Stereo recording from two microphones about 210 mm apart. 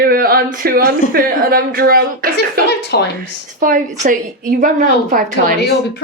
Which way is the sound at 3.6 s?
40° right (ahead or behind).